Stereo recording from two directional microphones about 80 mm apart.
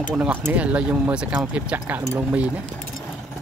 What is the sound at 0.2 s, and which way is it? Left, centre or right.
Speech, right.